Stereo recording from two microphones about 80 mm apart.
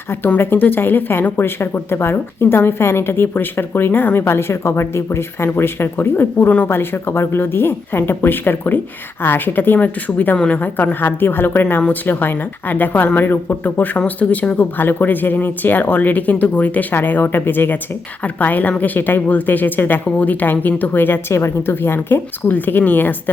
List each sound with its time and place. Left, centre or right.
0.1 s speech: left